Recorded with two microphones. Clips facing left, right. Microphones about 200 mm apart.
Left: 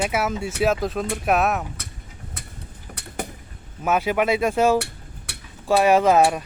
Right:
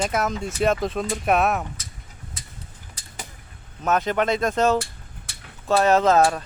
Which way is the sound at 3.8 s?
10° left (ahead or behind).